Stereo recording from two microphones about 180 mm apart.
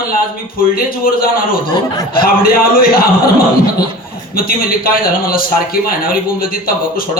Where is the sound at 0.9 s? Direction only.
55° left (ahead or behind).